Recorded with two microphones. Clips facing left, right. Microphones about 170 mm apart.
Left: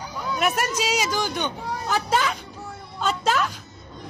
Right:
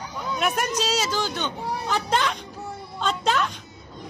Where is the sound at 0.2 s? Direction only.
5° left (ahead or behind).